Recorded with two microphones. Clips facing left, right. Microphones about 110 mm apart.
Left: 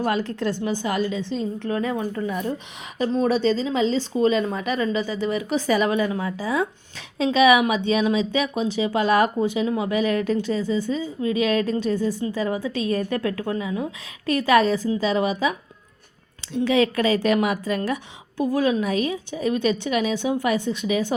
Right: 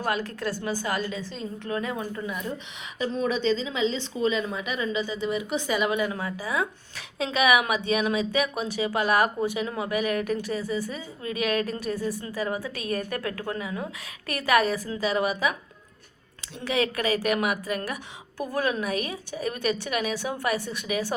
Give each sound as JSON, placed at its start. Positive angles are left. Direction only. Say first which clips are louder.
{"t": 0.0, "sound": "speech", "louder": "left 5 dB", "side_deg": 30}